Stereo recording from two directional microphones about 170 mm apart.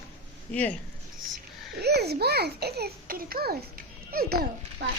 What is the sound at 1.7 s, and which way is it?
A child's voice, 70° right (ahead or behind).